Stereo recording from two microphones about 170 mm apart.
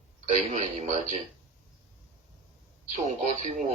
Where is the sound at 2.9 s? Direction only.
45° right (ahead or behind).